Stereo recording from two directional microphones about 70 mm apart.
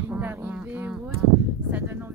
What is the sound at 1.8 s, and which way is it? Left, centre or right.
Speech, right.